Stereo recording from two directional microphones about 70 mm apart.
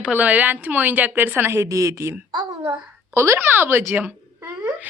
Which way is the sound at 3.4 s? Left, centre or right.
Right.